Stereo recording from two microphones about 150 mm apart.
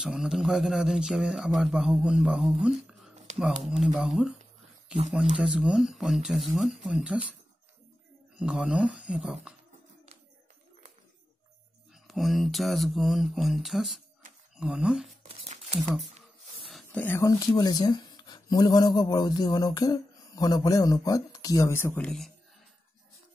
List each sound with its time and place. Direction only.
0.0 s speech: 5° right (ahead or behind)
8.4 s speech: 5° right (ahead or behind)
11.9 s speech: centre (ahead or behind)
15.2 s a sound: 45° right (ahead or behind)
16.9 s speech: 15° left (ahead or behind)